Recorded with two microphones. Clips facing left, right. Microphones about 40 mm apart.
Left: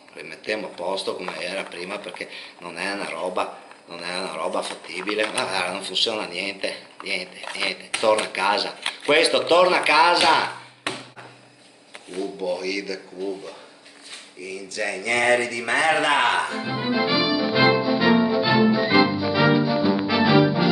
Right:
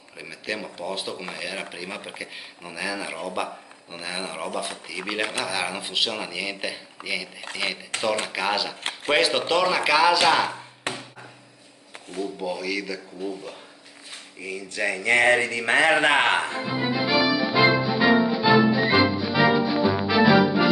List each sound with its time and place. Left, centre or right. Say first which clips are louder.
0.2 s speech: left 3 dB; centre
12.1 s speech: left 3 dB; centre
14.4 s speech: right 1 dB; right
16.6 s music: left 1 dB; centre